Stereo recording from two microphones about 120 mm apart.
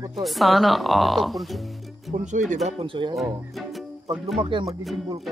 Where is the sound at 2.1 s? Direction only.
90° right.